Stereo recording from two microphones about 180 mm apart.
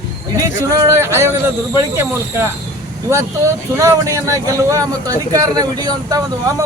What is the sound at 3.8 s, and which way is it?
Speech, 15° right (ahead or behind).